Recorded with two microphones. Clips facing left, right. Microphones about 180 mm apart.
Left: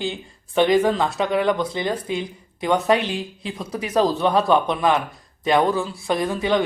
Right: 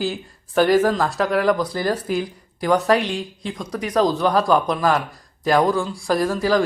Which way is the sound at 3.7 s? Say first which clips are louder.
Right 1 dB; 30° left (ahead or behind).